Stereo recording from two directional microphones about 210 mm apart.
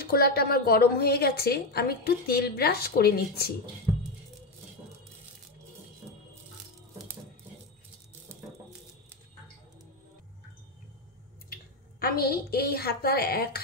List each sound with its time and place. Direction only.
0.0 s a woman's voice: 45° left (ahead or behind)
8.3 s a sound: 10° right (ahead or behind)
11.5 s a woman's voice: 45° left (ahead or behind)